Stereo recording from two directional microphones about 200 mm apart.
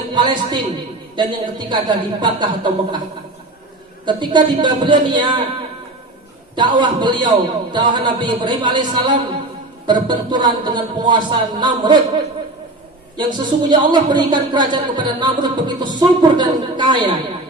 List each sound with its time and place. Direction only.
0.1 s a man's voice: 20° right (ahead or behind)
4.0 s a man's voice: 20° right (ahead or behind)
6.6 s a man's voice: 20° right (ahead or behind)
13.1 s a man's voice: 20° right (ahead or behind)